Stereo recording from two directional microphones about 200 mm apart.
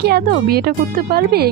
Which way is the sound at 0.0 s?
50° right (ahead or behind).